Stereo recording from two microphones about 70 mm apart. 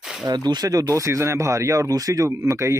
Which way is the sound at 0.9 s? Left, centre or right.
Right.